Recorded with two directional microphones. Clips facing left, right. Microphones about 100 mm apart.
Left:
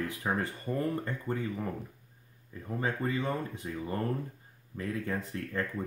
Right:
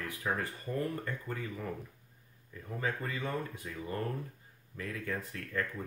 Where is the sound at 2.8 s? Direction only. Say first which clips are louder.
Left 4 dB; 30° left (ahead or behind).